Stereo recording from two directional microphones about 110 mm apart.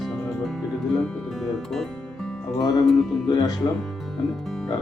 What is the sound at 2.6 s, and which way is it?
Speech, 35° left (ahead or behind).